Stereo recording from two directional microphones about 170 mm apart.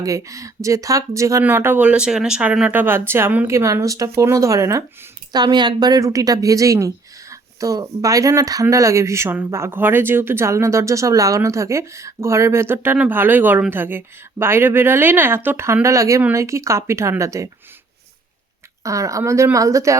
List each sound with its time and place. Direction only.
0.0 s a woman's voice: 20° right (ahead or behind)
18.8 s speech: 20° right (ahead or behind)